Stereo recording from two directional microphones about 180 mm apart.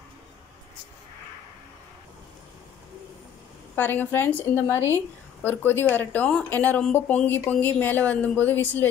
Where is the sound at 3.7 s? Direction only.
10° left (ahead or behind).